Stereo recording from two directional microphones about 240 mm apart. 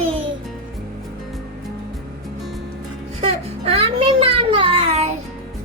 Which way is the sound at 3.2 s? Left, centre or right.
Right.